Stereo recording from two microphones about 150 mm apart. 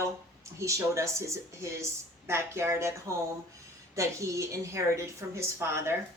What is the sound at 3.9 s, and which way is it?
Speech, 20° right (ahead or behind).